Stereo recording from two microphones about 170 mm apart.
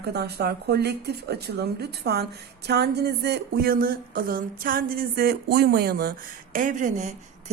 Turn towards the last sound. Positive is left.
turn(degrees=-45)  # may be behind; listen again after turning